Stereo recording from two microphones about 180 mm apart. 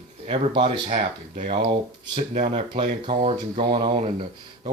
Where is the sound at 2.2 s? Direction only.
40° right (ahead or behind).